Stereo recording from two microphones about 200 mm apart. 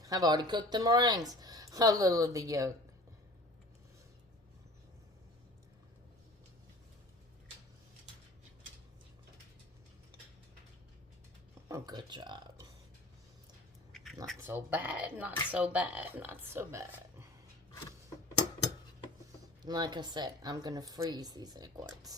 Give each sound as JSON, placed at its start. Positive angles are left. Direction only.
{"t": 0.0, "sound": "speech", "side_deg": -15}
{"t": 11.7, "sound": "speech", "side_deg": -20}
{"t": 13.9, "sound": "a sound", "side_deg": 0}
{"t": 14.4, "sound": "speech", "side_deg": -10}
{"t": 19.6, "sound": "speech", "side_deg": -20}